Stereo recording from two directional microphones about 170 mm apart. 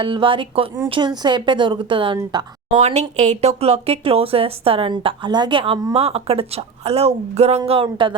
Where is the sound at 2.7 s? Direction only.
40° right (ahead or behind).